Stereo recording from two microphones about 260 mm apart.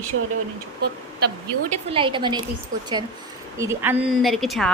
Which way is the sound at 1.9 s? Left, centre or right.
Centre.